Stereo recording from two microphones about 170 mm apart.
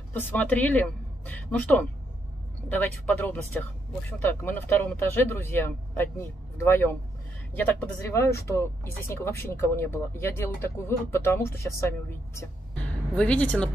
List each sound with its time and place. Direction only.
0.1 s speech: 10° left (ahead or behind)
3.1 s speech: 10° left (ahead or behind)